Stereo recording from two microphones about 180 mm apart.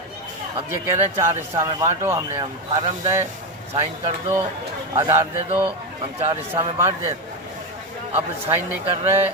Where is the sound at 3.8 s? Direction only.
30° right (ahead or behind).